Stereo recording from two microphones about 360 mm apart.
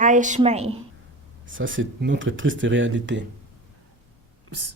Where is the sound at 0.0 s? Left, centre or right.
Right.